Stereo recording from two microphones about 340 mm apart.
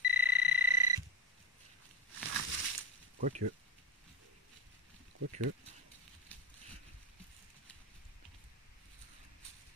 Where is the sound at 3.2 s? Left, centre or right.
Right.